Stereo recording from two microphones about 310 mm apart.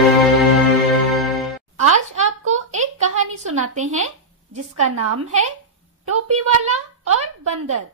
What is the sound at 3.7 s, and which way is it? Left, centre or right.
Speech, right.